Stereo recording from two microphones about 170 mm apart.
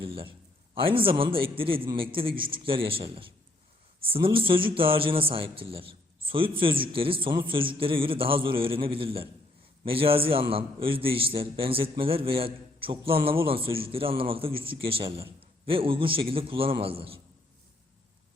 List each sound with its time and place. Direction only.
0.0 s a man's voice: 30° right (ahead or behind)